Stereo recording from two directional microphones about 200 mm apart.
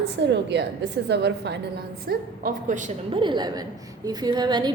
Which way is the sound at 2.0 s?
45° right (ahead or behind).